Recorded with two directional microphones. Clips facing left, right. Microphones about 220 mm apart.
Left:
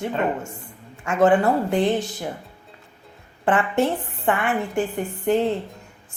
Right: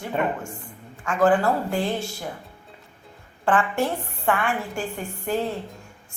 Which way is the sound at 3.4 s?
20° left (ahead or behind).